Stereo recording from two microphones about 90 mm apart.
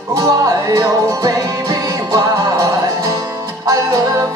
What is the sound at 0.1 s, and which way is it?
Music, 35° right (ahead or behind).